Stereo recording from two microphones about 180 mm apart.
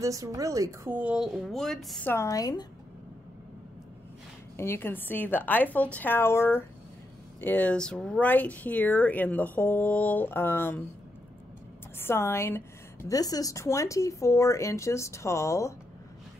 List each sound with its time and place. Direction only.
0.0 s speech: 20° right (ahead or behind); by 2.0 s centre (ahead or behind)
2.0 s a woman's voice: 15° left (ahead or behind)
4.6 s speech: 15° left (ahead or behind)
12.0 s speech: 15° left (ahead or behind)